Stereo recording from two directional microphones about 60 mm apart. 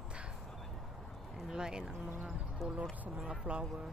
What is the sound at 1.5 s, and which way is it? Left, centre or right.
Speech, centre.